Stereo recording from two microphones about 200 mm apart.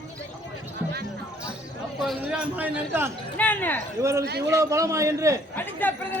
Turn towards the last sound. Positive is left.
turn(degrees=10)  # may be behind; listen again after turning